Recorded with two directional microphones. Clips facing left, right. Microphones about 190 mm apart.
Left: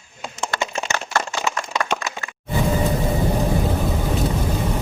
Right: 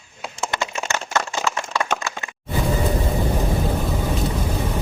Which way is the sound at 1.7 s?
15° left (ahead or behind).